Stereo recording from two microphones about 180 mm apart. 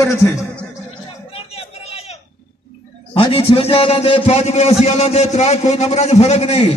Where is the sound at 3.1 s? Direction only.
30° left (ahead or behind).